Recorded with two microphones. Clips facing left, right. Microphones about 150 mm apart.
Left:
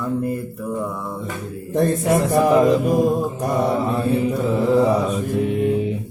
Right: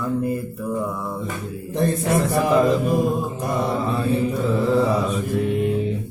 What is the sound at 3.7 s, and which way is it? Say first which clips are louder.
Mantra: left 2 dB; 15° left (ahead or behind).